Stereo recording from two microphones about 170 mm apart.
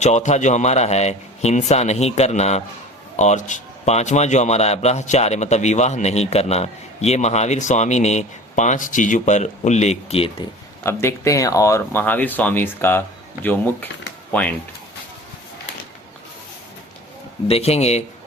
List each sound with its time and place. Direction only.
0.0 s speech: 45° left (ahead or behind)
10.8 s speech: 15° left (ahead or behind)
17.5 s speech: 40° left (ahead or behind)